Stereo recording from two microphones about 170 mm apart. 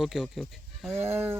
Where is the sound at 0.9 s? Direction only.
15° right (ahead or behind).